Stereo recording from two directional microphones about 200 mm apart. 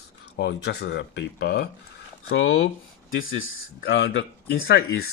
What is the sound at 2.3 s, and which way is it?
Speech, 70° left (ahead or behind).